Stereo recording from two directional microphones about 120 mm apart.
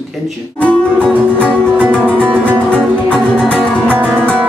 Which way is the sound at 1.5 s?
15° right (ahead or behind).